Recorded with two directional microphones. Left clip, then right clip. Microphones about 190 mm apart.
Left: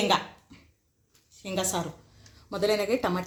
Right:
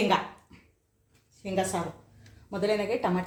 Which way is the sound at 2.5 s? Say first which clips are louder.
Left 2 dB; 40° left (ahead or behind).